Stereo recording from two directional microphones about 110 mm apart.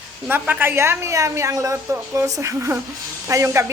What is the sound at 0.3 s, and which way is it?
A woman's voice, 15° right (ahead or behind).